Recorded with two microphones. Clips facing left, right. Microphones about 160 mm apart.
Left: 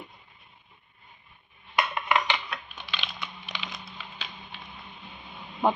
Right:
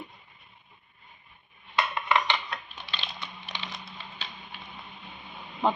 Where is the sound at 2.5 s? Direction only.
30° right (ahead or behind).